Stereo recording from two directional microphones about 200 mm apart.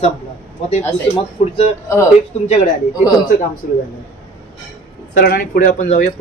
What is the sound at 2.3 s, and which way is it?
Speech, 30° left (ahead or behind).